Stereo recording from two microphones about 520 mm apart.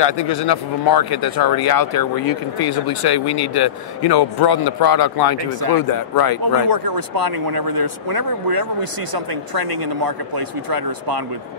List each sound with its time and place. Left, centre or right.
0.0 s a man's voice: left
6.5 s speech: right
10.0 s speech: right